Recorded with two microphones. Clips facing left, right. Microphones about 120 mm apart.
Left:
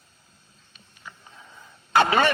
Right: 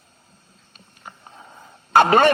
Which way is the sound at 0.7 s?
45° right (ahead or behind).